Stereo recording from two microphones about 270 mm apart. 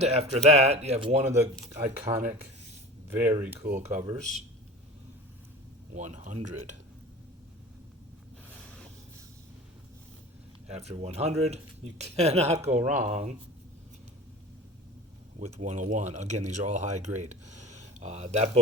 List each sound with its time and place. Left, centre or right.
0.0 s speech: right
3.1 s speech: centre
3.6 s speech: right
5.9 s speech: right
10.7 s speech: right
15.4 s speech: right